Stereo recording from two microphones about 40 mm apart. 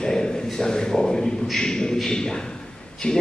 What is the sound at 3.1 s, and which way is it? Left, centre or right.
Speech, centre.